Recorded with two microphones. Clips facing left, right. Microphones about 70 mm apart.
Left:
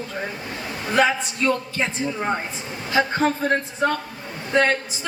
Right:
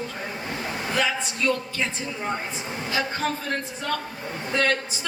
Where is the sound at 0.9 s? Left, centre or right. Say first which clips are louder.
Left 7 dB; left.